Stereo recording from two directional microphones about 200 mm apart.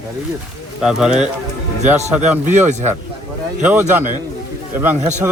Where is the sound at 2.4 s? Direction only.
35° right (ahead or behind).